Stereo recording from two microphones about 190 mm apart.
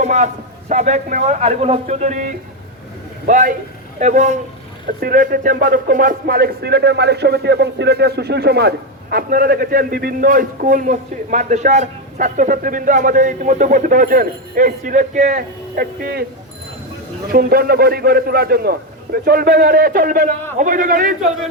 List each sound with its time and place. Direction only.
0.0 s a man's voice: 40° right (ahead or behind)
17.3 s speech: 55° right (ahead or behind)